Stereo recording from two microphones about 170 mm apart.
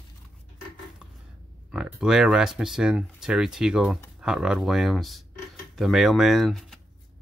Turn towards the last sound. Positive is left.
turn(degrees=0)  # may be behind; listen again after turning